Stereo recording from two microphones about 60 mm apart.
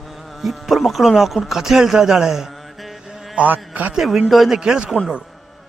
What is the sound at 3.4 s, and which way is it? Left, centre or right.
Speech, right.